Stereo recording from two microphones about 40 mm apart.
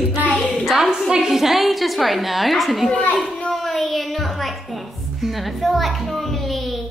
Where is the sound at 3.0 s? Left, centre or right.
Left.